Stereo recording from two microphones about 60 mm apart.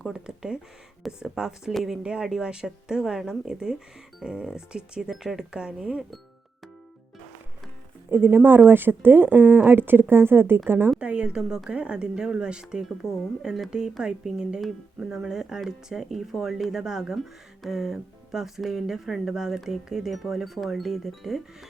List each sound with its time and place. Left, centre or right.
0.3 s a woman's voice: centre
2.0 s a woman's voice: centre
8.1 s speech: right
11.0 s a woman's voice: centre